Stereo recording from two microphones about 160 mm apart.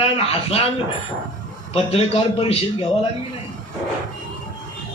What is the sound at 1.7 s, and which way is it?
A man's voice, 40° left (ahead or behind).